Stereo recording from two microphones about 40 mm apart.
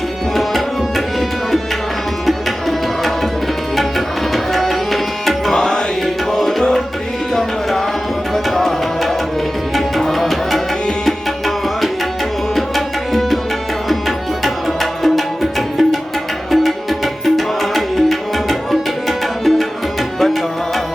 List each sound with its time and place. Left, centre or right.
0.3 s tabla: centre
2.2 s tabla: centre
5.5 s tabla: centre
7.3 s tabla: centre
14.4 s music: centre
17.2 s tabla: centre